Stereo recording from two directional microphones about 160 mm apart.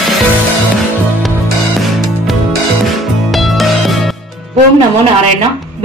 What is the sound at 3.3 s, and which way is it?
Music, centre (ahead or behind).